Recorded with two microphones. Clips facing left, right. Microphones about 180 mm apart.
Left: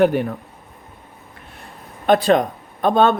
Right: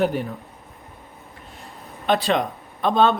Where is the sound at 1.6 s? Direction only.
50° left (ahead or behind).